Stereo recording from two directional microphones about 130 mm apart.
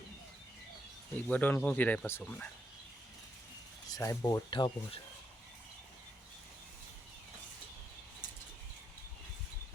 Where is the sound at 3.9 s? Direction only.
25° left (ahead or behind).